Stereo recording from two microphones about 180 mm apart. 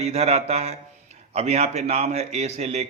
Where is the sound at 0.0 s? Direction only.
35° right (ahead or behind).